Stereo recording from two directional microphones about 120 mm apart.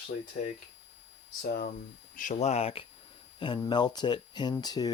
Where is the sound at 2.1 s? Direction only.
80° left; by 2.8 s 55° left (ahead or behind).